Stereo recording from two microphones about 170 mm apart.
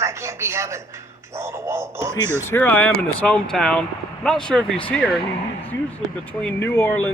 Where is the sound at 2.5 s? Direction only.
10° left (ahead or behind).